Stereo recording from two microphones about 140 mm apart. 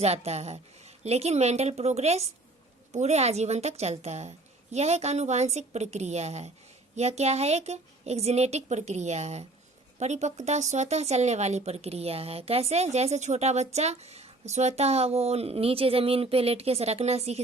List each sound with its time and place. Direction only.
0.0 s speech: 50° right (ahead or behind)